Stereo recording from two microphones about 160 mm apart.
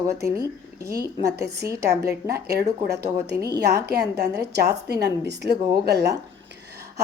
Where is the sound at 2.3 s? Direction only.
90° right.